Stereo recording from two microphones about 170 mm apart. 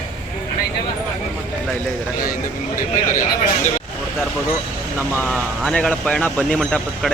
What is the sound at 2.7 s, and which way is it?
Speech, 50° left (ahead or behind).